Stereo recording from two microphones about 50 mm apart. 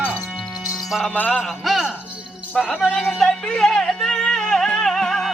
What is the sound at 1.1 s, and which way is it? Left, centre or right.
Music, left.